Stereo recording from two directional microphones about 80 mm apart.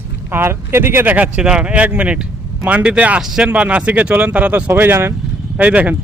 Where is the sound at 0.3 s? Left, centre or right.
Right.